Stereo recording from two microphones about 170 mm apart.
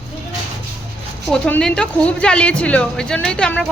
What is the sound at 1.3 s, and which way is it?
A woman's voice, 5° left (ahead or behind).